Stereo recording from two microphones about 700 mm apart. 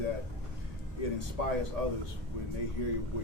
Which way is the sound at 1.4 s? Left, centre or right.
Left.